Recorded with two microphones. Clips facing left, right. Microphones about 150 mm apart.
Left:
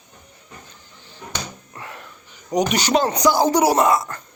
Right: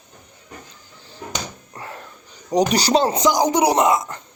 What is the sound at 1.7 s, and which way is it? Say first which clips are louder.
Speech: right 2 dB; 35° right (ahead or behind).